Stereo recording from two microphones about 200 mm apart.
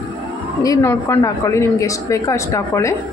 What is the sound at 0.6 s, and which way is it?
A woman's voice, 15° left (ahead or behind).